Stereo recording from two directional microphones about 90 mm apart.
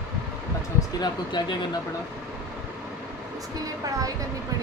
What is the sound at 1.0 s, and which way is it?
Speech, 55° left (ahead or behind).